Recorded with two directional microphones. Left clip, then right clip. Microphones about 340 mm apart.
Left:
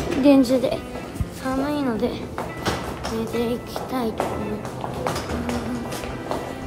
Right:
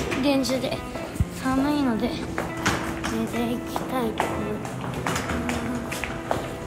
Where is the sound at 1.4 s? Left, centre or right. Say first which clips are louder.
Even; centre.